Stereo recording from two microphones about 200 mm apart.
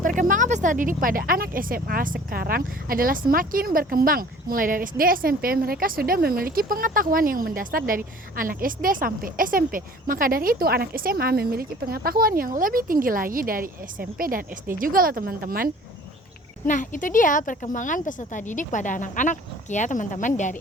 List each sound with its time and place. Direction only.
0.0 s speech: 40° right (ahead or behind)
16.6 s a woman's voice: 40° left (ahead or behind)